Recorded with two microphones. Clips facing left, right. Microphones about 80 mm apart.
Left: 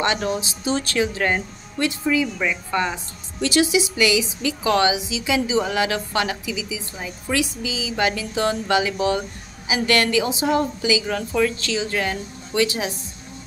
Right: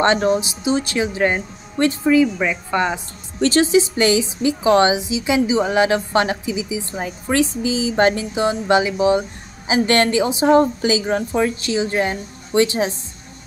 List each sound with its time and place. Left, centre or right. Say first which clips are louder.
0.0 s a woman's voice: right 6 dB; right
0.7 s a woman's voice: right 2 dB; centre
1.8 s a woman's voice: right 6 dB; right
2.3 s a woman's voice: right 3 dB; centre
3.3 s a woman's voice: right 4 dB; right
8.4 s a woman's voice: right 2 dB; right